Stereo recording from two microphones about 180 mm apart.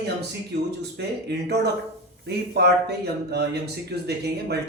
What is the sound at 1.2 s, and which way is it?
Speech, 65° right (ahead or behind).